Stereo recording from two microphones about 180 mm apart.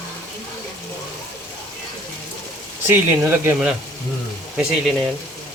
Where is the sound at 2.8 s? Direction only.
10° right (ahead or behind).